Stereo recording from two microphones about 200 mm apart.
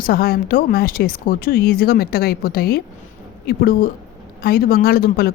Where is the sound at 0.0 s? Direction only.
50° left (ahead or behind).